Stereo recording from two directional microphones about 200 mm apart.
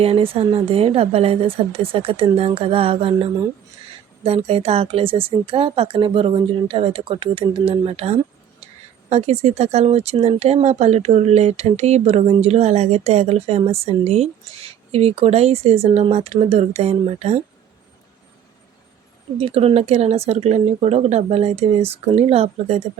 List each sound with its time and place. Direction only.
0.0 s speech: 30° right (ahead or behind)
4.2 s speech: 30° right (ahead or behind)
19.4 s speech: 30° right (ahead or behind)